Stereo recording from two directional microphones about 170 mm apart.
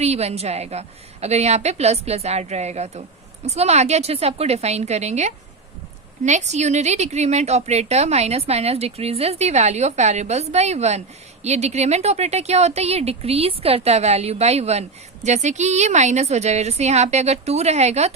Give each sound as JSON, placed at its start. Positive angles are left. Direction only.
{"t": 0.0, "sound": "a woman's voice", "side_deg": -40}